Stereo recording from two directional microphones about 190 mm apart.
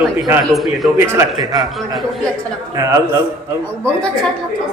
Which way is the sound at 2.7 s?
15° right (ahead or behind).